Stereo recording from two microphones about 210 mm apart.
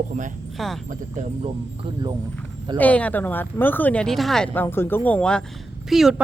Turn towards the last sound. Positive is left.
turn(degrees=0)  # may be behind; listen again after turning